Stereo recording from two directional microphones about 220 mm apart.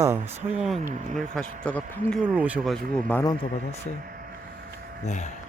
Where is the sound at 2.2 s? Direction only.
5° right (ahead or behind).